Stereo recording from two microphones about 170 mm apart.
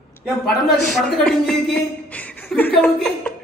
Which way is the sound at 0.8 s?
Centre (ahead or behind).